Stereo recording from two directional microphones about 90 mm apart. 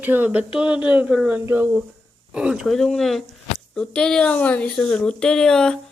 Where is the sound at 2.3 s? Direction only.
10° right (ahead or behind).